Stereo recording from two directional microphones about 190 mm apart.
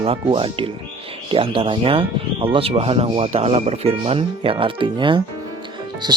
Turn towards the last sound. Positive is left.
turn(degrees=-20)  # may be behind; listen again after turning